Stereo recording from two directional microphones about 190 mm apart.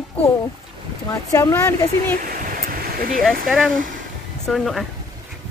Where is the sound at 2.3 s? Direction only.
50° right (ahead or behind).